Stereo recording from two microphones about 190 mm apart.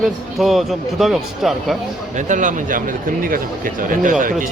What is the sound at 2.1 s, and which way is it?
Speech, 40° right (ahead or behind).